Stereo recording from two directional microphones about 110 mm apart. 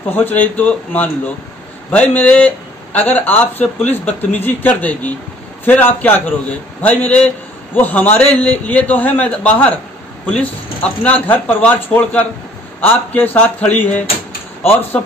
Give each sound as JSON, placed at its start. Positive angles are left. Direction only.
{"t": 0.1, "sound": "speech", "side_deg": 15}